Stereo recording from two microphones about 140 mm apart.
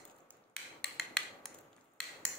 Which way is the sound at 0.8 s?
5° left (ahead or behind).